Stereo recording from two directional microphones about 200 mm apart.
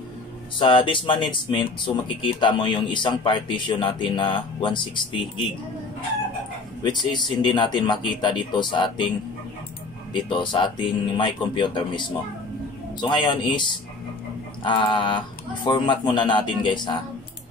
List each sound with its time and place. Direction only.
0.6 s speech: 25° left (ahead or behind)
7.1 s speech: 20° left (ahead or behind)
10.3 s speech: 25° left (ahead or behind)
13.0 s speech: 25° left (ahead or behind)